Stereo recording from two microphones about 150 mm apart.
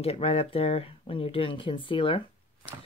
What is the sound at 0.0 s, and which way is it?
Speech, 40° left (ahead or behind).